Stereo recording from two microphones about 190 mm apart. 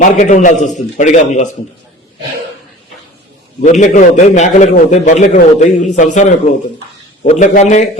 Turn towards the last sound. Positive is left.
turn(degrees=40)  # may be behind; listen again after turning